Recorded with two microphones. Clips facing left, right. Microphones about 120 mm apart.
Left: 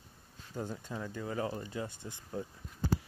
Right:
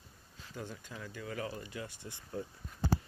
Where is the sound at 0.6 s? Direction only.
35° left (ahead or behind); by 2.5 s 20° left (ahead or behind).